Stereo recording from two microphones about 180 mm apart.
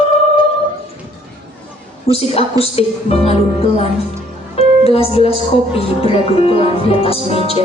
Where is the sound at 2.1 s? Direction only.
35° left (ahead or behind).